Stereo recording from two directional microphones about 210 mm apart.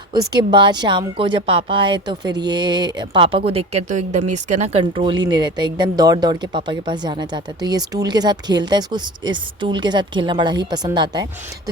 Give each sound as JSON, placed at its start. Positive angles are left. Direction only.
{"t": 0.1, "sound": "speech", "side_deg": -20}